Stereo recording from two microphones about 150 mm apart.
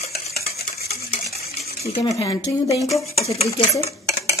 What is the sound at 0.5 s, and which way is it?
Stir, 90° left.